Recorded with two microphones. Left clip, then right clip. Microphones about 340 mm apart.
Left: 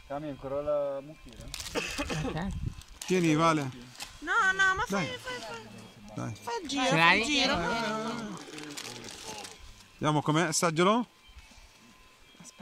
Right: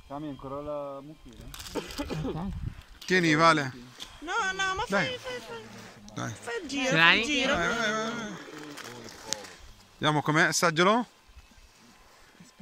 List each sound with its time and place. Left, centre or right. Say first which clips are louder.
0.1 s speech: left 3 dB; left
3.1 s speech: right 4 dB; centre
4.3 s speech: left 4 dB; centre
9.9 s speech: right 3 dB; centre